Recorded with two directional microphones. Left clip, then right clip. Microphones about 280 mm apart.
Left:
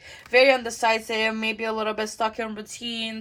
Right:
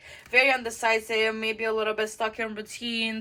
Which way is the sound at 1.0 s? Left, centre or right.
Left.